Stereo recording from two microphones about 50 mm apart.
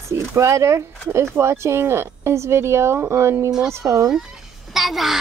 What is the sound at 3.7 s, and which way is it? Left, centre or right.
Speech, right.